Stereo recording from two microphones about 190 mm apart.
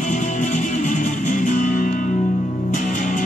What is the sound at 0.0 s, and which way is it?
Music, 40° left (ahead or behind).